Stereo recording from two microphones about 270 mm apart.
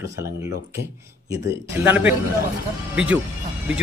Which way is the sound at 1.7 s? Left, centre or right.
Centre.